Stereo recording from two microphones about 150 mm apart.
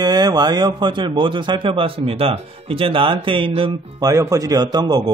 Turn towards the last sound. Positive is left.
turn(degrees=-25)  # may be behind; listen again after turning